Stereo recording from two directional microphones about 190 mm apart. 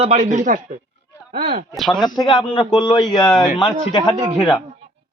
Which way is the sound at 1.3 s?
55° right (ahead or behind).